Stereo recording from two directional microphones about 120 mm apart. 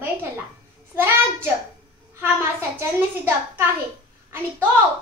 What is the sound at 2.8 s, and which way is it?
Speech, 20° right (ahead or behind).